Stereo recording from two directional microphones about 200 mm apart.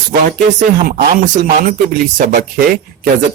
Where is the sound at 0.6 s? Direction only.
40° right (ahead or behind).